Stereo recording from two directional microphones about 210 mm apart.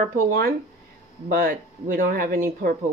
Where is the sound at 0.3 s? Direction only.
45° right (ahead or behind).